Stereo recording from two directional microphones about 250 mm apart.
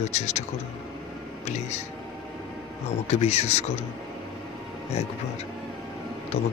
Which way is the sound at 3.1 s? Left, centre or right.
Left.